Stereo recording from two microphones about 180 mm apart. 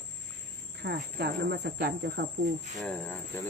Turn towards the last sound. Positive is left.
turn(degrees=5)  # may be behind; listen again after turning